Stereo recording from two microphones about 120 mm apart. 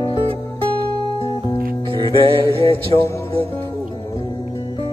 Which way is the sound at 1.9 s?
45° right (ahead or behind).